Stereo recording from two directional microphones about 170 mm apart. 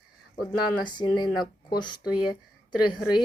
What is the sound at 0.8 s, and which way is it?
Speech, 25° left (ahead or behind).